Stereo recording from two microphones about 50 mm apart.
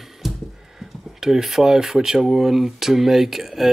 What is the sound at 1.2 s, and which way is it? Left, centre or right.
Speech, centre.